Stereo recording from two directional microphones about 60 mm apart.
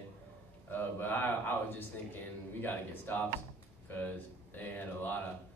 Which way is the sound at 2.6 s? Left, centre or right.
Left.